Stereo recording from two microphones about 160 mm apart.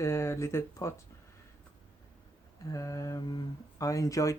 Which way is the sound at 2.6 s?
20° left (ahead or behind).